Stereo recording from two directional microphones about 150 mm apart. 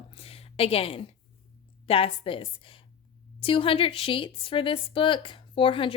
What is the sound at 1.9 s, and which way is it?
A woman's voice, 40° left (ahead or behind).